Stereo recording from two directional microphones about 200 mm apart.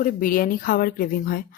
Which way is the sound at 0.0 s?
45° left (ahead or behind).